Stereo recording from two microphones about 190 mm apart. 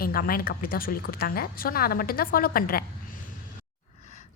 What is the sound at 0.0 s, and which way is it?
Speech, 50° left (ahead or behind).